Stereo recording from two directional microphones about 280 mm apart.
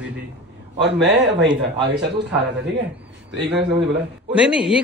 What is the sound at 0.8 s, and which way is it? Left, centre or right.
Speech, right.